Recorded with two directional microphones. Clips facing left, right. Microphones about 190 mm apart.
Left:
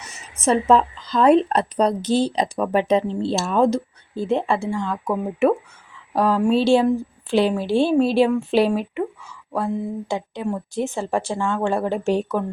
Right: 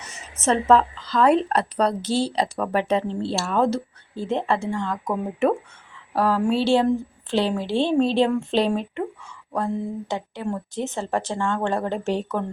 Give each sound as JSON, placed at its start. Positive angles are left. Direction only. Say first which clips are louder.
{"t": 0.4, "sound": "a woman's voice", "louder": "left 1 dB", "side_deg": 15}